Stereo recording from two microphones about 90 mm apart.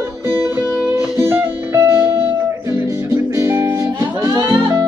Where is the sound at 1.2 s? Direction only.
30° right (ahead or behind).